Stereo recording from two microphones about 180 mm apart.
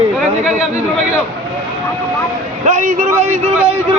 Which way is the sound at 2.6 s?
40° right (ahead or behind).